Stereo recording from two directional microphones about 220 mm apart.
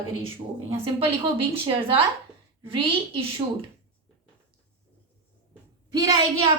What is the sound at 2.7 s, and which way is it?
Speech, 25° right (ahead or behind).